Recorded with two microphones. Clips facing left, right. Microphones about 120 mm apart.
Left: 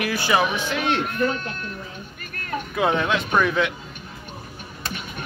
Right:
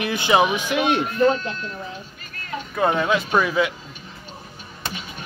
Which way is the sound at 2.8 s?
Centre (ahead or behind).